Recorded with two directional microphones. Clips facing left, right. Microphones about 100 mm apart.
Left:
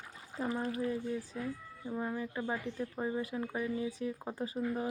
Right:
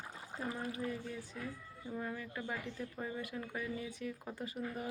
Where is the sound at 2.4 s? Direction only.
35° left (ahead or behind).